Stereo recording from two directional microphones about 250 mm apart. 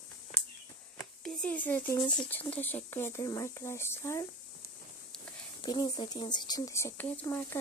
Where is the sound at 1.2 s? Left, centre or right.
Centre.